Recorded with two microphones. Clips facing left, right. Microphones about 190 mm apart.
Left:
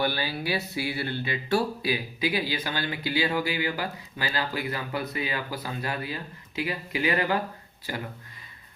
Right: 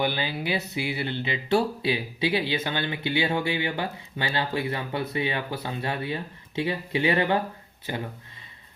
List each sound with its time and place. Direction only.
0.0 s speech: 20° right (ahead or behind)